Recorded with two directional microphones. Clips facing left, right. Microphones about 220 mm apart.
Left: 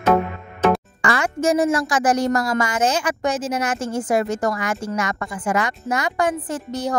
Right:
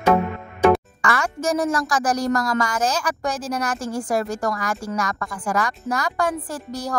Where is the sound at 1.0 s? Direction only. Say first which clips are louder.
Left 2 dB; 25° left (ahead or behind).